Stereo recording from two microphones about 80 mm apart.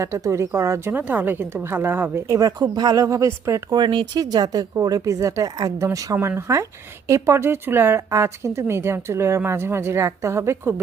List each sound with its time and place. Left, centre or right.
0.0 s speech: right
0.9 s a woman's voice: right
2.2 s a woman's voice: right
3.7 s speech: right
4.2 s a woman's voice: right
6.1 s speech: right